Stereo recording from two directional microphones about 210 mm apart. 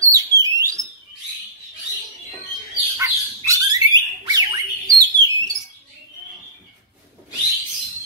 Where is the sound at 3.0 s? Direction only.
15° right (ahead or behind).